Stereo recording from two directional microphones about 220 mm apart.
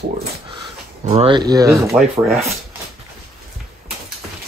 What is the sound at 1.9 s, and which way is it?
Rub, centre (ahead or behind).